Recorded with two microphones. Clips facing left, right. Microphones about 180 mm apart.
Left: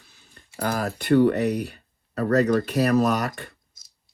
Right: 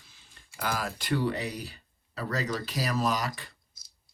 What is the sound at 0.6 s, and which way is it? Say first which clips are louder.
Speech: left 6 dB; 50° left (ahead or behind).